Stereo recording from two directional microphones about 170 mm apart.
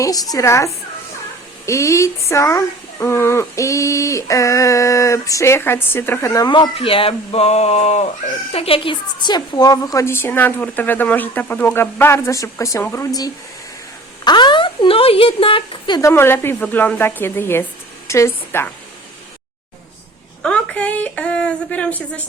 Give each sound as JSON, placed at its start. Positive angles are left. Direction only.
{"t": 0.0, "sound": "a woman's voice", "side_deg": 20}
{"t": 16.0, "sound": "a woman's voice", "side_deg": 15}
{"t": 20.4, "sound": "a woman's voice", "side_deg": 5}